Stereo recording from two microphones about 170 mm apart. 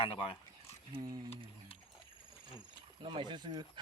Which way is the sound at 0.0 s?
35° left (ahead or behind).